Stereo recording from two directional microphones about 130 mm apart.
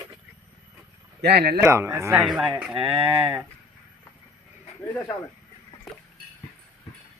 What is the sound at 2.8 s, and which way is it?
Speech, 45° right (ahead or behind).